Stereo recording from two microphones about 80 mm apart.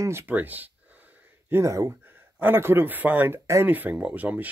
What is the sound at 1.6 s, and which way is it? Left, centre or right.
Speech, right.